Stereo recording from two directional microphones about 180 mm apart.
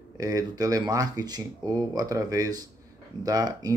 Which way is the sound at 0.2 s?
20° right (ahead or behind).